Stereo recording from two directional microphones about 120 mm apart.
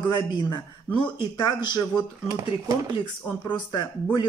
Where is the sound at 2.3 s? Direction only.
30° right (ahead or behind).